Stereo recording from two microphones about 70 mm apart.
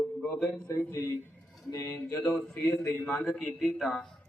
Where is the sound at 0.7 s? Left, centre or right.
Left.